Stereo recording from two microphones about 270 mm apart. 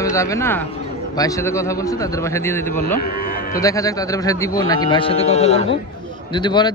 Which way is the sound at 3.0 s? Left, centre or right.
Left.